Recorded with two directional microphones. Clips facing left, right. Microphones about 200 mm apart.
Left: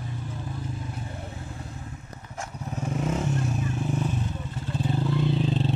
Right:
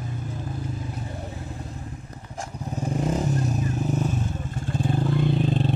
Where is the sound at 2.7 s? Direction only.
35° right (ahead or behind).